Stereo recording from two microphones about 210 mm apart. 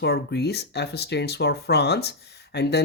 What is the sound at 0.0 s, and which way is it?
Speech, 50° left (ahead or behind).